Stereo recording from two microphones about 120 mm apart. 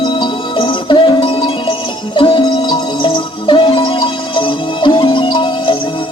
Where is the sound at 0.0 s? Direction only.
45° left (ahead or behind).